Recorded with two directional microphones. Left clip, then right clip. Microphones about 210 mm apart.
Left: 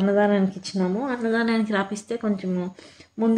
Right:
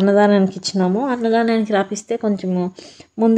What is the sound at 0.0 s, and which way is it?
Speech, 25° right (ahead or behind).